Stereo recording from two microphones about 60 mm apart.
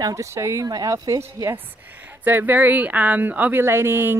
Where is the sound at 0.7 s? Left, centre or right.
Right.